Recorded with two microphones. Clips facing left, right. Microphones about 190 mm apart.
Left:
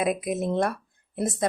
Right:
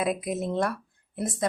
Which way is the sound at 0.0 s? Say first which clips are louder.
Left 2 dB; 20° left (ahead or behind).